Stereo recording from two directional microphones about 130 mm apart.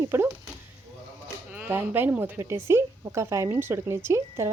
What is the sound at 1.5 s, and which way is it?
Speech, 15° right (ahead or behind).